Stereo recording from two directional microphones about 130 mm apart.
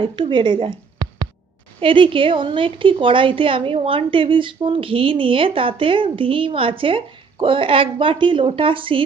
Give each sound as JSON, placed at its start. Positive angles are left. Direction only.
{"t": 0.0, "sound": "a woman's voice", "side_deg": -40}